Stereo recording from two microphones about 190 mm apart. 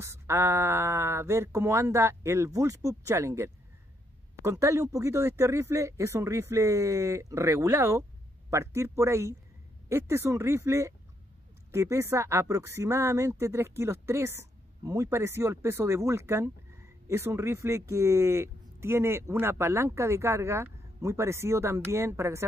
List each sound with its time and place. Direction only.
0.0 s speech: 15° right (ahead or behind)